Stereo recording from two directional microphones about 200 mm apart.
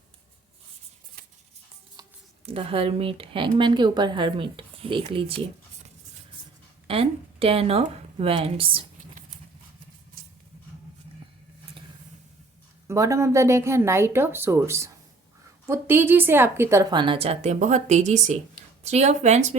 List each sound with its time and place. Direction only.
2.0 s a sound: 20° right (ahead or behind)
2.5 s a woman's voice: 30° right (ahead or behind)
6.8 s speech: 30° right (ahead or behind)
10.2 s vehicle: 45° right (ahead or behind)
12.9 s a woman's voice: 15° right (ahead or behind); by 19.5 s 35° right (ahead or behind)